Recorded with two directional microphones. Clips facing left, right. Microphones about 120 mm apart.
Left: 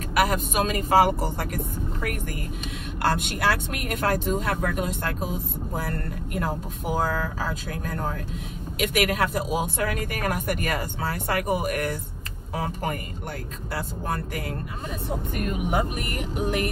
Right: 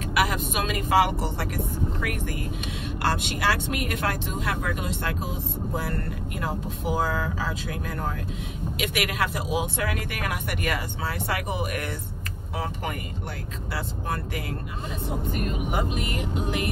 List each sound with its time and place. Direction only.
0.1 s speech: 45° left (ahead or behind)
3.0 s speech: 50° left (ahead or behind)
7.0 s speech: 40° left (ahead or behind)
13.7 s speech: 50° left (ahead or behind)